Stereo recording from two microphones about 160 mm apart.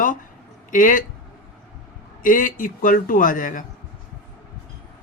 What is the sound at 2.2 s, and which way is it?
A man's voice, 55° left (ahead or behind).